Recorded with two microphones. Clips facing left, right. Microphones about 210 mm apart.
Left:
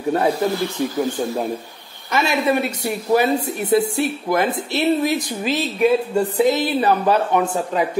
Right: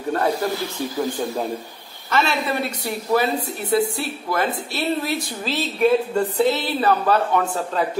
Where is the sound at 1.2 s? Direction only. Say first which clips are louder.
Left 2 dB; 10° left (ahead or behind).